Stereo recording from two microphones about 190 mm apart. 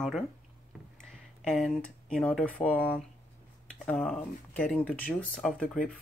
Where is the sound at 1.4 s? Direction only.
5° left (ahead or behind).